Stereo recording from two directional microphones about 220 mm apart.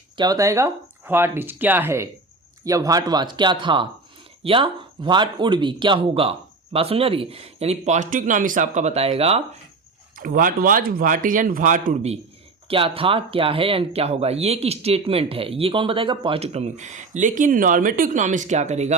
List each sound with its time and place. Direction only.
0.2 s speech: 15° right (ahead or behind)
10.2 s speech: 40° right (ahead or behind)